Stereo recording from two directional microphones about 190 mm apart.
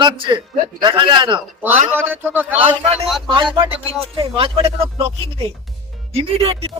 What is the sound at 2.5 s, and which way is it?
A man's voice, 35° right (ahead or behind).